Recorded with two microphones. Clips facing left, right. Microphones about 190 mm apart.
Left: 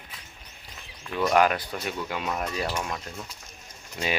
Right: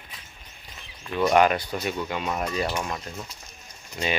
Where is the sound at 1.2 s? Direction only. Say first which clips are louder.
Right 2 dB; centre (ahead or behind).